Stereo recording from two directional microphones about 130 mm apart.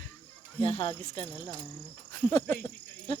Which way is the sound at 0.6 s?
45° left (ahead or behind).